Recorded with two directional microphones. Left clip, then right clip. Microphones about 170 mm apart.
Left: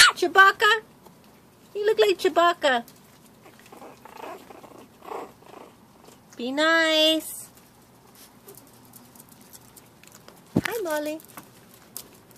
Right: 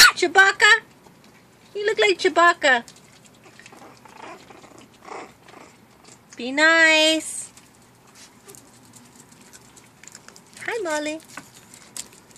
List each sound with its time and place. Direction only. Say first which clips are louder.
0.1 s speech: right 1 dB; 5° left (ahead or behind)
1.8 s speech: right 1 dB; 5° left (ahead or behind)
3.8 s dog: left 3 dB; 10° left (ahead or behind)
5.0 s purr: left 1 dB; 10° left (ahead or behind)
6.3 s speech: right 4 dB; 5° left (ahead or behind)
10.7 s speech: right 8 dB; 5° right (ahead or behind)